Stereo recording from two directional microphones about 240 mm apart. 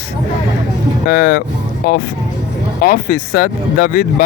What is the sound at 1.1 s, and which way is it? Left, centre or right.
Speech, left.